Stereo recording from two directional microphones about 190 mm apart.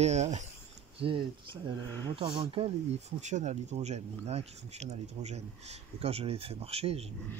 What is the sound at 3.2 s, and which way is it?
Speech, 40° right (ahead or behind).